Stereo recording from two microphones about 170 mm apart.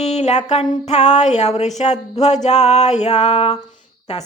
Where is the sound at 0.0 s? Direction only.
40° left (ahead or behind).